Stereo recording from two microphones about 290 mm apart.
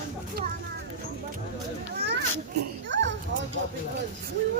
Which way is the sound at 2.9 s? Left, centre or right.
Right.